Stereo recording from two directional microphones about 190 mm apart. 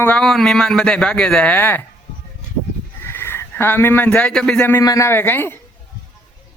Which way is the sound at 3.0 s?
10° left (ahead or behind).